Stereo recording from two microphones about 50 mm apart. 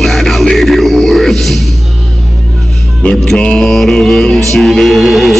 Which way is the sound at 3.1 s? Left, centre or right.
Centre.